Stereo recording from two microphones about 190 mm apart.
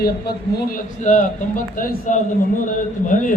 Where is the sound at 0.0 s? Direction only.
55° left (ahead or behind).